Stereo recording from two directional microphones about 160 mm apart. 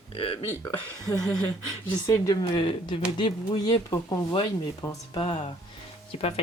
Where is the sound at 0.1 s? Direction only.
35° left (ahead or behind).